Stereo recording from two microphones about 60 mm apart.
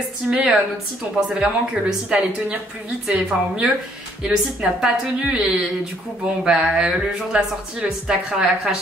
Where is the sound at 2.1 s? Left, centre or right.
Centre.